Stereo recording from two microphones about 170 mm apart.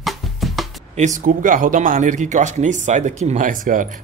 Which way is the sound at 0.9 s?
45° right (ahead or behind).